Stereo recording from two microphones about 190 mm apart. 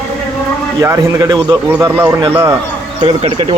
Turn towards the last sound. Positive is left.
turn(degrees=-25)  # may be behind; listen again after turning